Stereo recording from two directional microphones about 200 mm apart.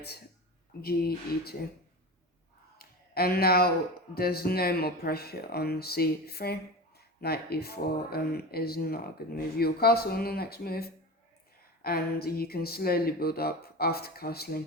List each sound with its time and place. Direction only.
0.8 s speech: 50° left (ahead or behind)
2.7 s a sound: 50° left (ahead or behind)
4.1 s speech: 50° left (ahead or behind)